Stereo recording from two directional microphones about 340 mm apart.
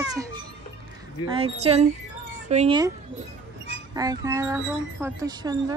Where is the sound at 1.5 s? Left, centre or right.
Centre.